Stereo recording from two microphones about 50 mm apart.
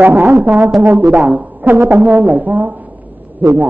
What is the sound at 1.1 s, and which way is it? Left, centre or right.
Speech, right.